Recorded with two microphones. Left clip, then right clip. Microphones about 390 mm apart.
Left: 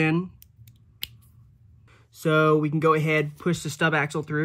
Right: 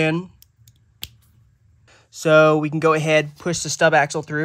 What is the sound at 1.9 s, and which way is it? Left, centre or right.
Speech, centre.